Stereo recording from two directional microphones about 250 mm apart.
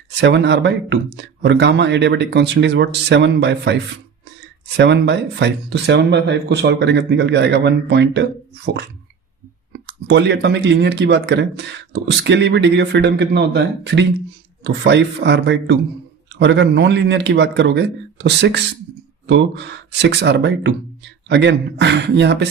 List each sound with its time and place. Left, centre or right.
0.1 s speech: right
4.8 s speech: right